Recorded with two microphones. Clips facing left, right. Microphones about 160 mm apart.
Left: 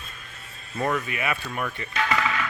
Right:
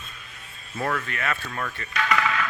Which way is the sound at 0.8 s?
5° left (ahead or behind).